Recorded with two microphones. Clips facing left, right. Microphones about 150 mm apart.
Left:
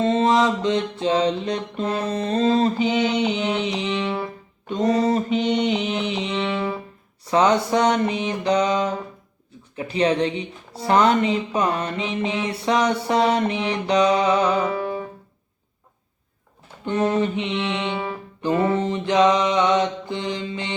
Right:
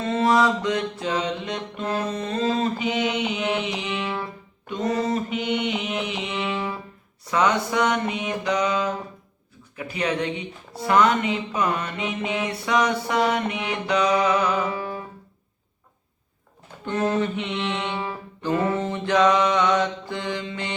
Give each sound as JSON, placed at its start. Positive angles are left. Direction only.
{"t": 0.0, "sound": "mantra", "side_deg": 25}
{"t": 3.6, "sound": "music", "side_deg": 30}
{"t": 7.3, "sound": "mantra", "side_deg": 30}
{"t": 9.7, "sound": "music", "side_deg": 30}
{"t": 10.8, "sound": "mantra", "side_deg": 30}
{"t": 16.8, "sound": "music", "side_deg": 20}